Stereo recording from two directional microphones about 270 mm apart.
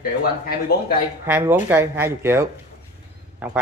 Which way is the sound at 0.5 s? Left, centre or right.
Left.